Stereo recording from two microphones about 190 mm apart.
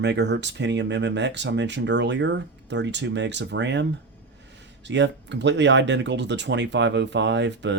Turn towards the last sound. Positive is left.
turn(degrees=-70)  # may be behind; listen again after turning